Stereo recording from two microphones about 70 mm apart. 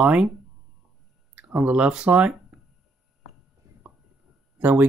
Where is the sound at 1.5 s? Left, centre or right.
Right.